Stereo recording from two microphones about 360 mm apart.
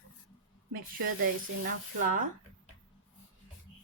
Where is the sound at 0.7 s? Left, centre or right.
Right.